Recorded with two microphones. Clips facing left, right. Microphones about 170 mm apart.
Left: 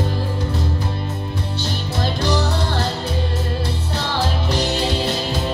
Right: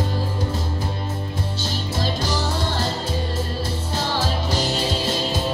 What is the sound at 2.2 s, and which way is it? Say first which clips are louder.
Music: left 4 dB; 60° left (ahead or behind).